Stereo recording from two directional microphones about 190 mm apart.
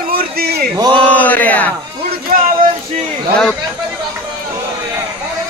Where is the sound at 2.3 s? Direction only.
45° right (ahead or behind).